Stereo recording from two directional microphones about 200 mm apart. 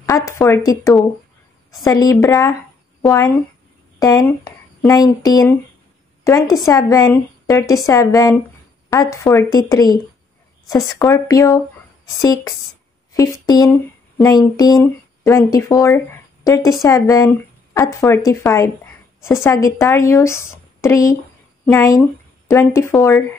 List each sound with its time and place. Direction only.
0.0 s a woman's voice: 15° left (ahead or behind)
6.6 s a woman's voice: 15° left (ahead or behind)